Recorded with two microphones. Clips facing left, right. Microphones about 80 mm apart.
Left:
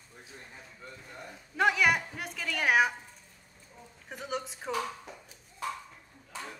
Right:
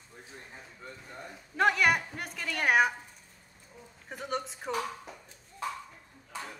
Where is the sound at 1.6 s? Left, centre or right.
Centre.